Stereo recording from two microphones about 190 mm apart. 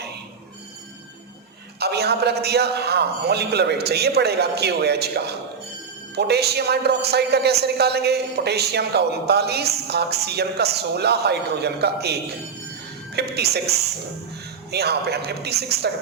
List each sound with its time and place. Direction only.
1.8 s a man's voice: 60° right (ahead or behind)
13.1 s a man's voice: 60° right (ahead or behind)